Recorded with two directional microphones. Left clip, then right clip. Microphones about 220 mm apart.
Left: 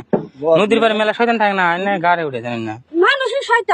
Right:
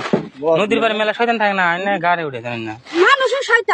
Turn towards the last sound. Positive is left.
turn(degrees=-10)  # may be behind; listen again after turning